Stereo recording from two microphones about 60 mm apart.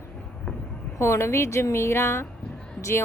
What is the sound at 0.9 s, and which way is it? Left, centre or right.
Speech, left.